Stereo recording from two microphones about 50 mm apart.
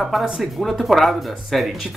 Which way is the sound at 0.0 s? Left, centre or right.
Centre.